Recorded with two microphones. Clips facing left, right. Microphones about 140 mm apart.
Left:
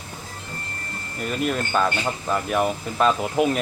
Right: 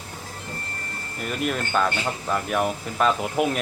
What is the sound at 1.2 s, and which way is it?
Speech, centre (ahead or behind).